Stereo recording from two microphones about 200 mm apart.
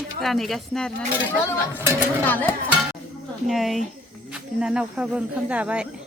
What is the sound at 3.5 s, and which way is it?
Speech, centre (ahead or behind).